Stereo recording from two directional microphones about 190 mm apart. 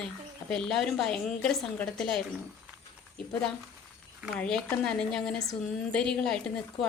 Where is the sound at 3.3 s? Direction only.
10° left (ahead or behind).